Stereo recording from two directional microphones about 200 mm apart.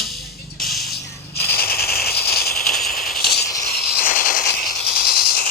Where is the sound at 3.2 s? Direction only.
55° left (ahead or behind).